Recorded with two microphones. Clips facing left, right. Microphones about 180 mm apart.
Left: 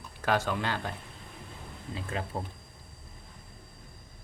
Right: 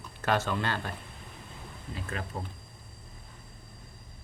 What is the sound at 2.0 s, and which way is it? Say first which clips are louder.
Speech: left 2 dB; 25° left (ahead or behind).